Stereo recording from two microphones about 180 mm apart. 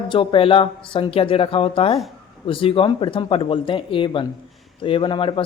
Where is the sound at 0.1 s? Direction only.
30° left (ahead or behind).